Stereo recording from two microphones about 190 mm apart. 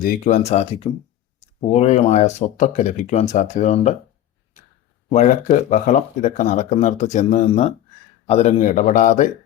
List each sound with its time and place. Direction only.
0.0 s speech: 50° left (ahead or behind)
0.3 s speech: 35° left (ahead or behind)
5.1 s speech: 40° left (ahead or behind)